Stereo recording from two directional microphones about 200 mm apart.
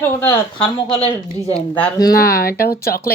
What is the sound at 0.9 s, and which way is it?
Speech, 30° left (ahead or behind).